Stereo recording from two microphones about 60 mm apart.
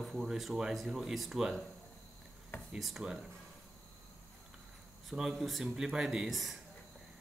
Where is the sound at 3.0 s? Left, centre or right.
Centre.